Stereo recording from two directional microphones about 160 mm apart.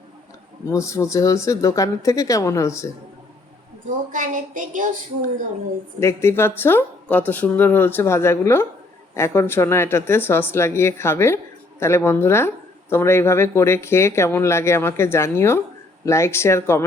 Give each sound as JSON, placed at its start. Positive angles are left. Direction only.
{"t": 0.7, "sound": "speech", "side_deg": 20}
{"t": 4.1, "sound": "a sound", "side_deg": -55}
{"t": 6.0, "sound": "speech", "side_deg": 15}